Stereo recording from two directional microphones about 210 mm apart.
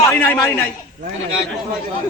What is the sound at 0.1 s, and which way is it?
Speech, 10° left (ahead or behind).